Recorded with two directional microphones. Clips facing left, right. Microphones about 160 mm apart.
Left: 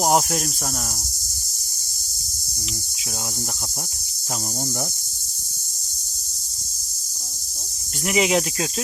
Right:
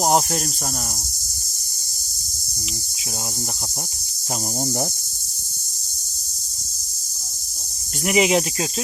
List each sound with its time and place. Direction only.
0.0 s cricket: centre (ahead or behind)
8.0 s cricket: 15° right (ahead or behind)
8.3 s cricket: 5° right (ahead or behind)